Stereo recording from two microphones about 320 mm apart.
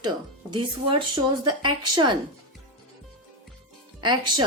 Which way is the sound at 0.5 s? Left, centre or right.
Centre.